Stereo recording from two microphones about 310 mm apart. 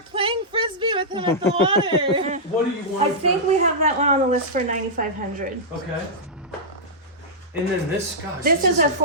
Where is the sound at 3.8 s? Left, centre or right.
Right.